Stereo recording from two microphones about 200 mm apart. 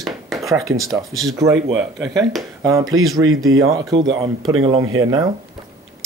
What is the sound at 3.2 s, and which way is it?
Speech, 90° right.